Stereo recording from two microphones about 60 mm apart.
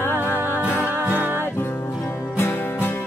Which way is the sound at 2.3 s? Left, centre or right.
Left.